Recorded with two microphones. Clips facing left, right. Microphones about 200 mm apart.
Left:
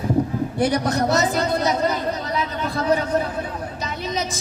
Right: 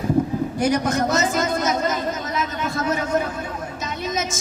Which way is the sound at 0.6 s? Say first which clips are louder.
Left 1 dB; 35° left (ahead or behind).